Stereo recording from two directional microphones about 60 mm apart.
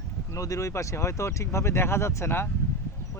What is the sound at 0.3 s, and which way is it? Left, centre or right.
Speech, left.